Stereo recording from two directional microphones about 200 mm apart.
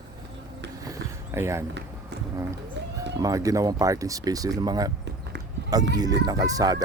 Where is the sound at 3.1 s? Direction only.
20° right (ahead or behind).